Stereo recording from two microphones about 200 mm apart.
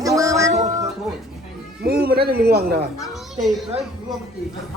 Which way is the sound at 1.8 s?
50° right (ahead or behind).